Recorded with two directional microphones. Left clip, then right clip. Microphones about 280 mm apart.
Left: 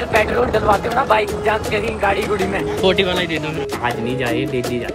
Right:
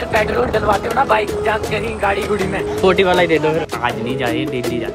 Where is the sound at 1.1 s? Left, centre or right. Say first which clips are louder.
Even; centre.